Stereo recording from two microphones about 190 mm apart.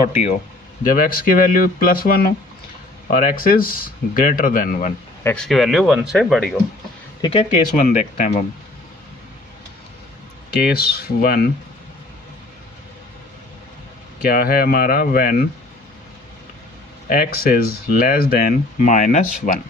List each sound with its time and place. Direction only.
0.9 s speech: 45° left (ahead or behind)
5.2 s speech: 5° left (ahead or behind)
7.2 s speech: 25° left (ahead or behind)
7.5 s speech: 40° left (ahead or behind)
10.6 s speech: 55° left (ahead or behind)
14.2 s speech: 50° left (ahead or behind)
17.1 s speech: 50° left (ahead or behind)